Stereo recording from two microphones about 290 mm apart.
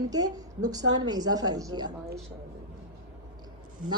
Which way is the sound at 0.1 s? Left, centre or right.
Centre.